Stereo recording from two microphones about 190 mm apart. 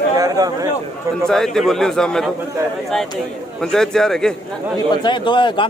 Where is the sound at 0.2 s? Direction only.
20° right (ahead or behind).